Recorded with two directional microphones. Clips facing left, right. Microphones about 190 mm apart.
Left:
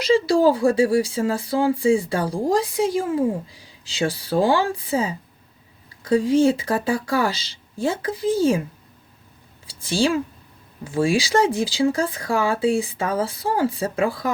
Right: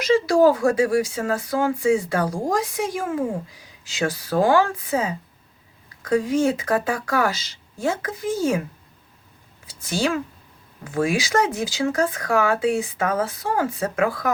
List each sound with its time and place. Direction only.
0.0 s speech: 30° left (ahead or behind)
9.6 s speech: 30° left (ahead or behind)